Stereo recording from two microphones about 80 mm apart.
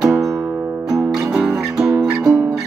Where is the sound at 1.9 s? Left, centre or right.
Right.